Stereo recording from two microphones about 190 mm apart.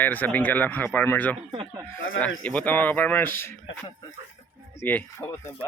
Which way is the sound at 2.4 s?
5° left (ahead or behind).